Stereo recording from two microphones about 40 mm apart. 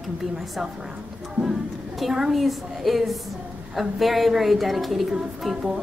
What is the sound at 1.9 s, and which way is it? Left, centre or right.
A woman's voice, centre.